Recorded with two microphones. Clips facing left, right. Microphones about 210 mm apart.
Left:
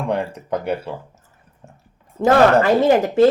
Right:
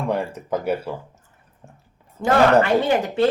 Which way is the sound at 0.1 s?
5° right (ahead or behind).